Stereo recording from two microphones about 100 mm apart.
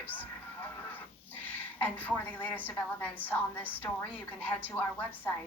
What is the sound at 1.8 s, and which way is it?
Speech, 20° left (ahead or behind).